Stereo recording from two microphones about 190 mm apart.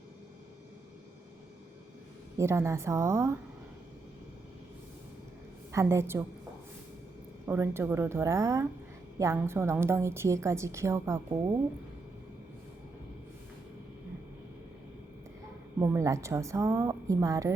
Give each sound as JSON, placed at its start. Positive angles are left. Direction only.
{"t": 2.4, "sound": "a woman's voice", "side_deg": -15}
{"t": 5.7, "sound": "a woman's voice", "side_deg": -15}
{"t": 7.4, "sound": "a woman's voice", "side_deg": -10}
{"t": 15.8, "sound": "a woman's voice", "side_deg": -15}